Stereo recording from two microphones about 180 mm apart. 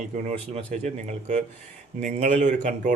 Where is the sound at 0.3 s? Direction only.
40° right (ahead or behind).